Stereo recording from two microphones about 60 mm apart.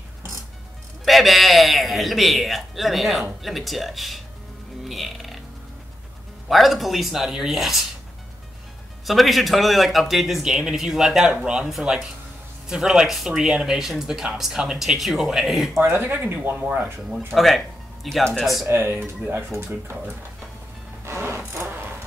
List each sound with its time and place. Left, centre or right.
1.0 s a man's voice: centre
6.5 s a man's voice: centre
9.0 s a man's voice: centre
15.8 s speech: right
17.3 s a man's voice: centre
18.7 s speech: right
21.0 s music: right